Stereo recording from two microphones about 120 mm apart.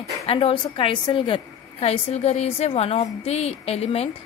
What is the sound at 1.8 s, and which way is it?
A woman's voice, 65° left (ahead or behind).